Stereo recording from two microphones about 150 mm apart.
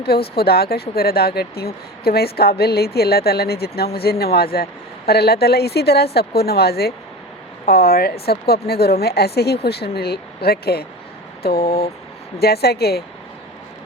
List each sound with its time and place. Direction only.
0.0 s speech: 90° left
11.6 s vehicle: 40° left (ahead or behind)
12.4 s speech: 90° left